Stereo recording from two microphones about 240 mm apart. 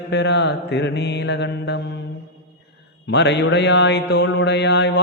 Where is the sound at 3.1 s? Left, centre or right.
Left.